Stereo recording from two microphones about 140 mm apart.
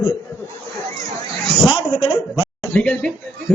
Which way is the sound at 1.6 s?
35° left (ahead or behind).